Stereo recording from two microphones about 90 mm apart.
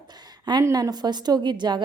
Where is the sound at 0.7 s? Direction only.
50° right (ahead or behind).